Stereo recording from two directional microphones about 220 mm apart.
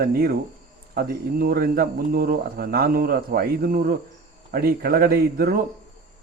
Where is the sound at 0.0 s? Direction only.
45° right (ahead or behind).